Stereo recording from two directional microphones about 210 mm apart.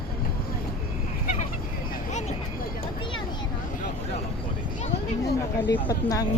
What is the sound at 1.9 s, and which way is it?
Vehicle, 35° left (ahead or behind).